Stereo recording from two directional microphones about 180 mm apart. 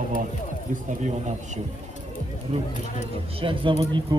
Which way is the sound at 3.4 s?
30° right (ahead or behind).